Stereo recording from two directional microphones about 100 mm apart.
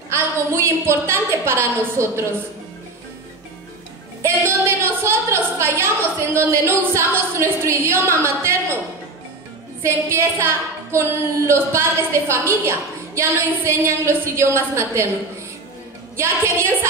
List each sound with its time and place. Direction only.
0.1 s a woman's voice: 25° right (ahead or behind)
4.2 s a sound: 25° right (ahead or behind)
6.3 s a woman's voice: 25° right (ahead or behind)
9.8 s a woman's voice: 25° right (ahead or behind)
16.2 s a woman's voice: 25° right (ahead or behind)